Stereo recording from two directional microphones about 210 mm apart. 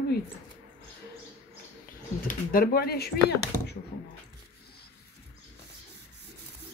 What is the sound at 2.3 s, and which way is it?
Speech, 45° left (ahead or behind).